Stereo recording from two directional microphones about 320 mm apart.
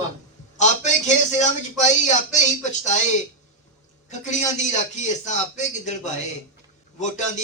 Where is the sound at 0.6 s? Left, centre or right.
Left.